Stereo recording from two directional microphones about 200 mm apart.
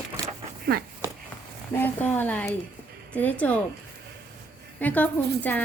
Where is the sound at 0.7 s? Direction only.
50° right (ahead or behind).